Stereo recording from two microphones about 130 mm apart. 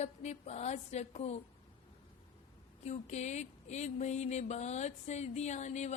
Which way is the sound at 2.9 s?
60° left (ahead or behind).